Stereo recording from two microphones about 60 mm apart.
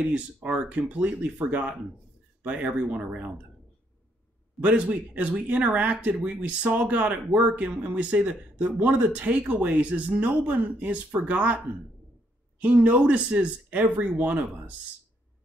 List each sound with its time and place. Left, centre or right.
0.1 s speech: right
4.6 s speech: right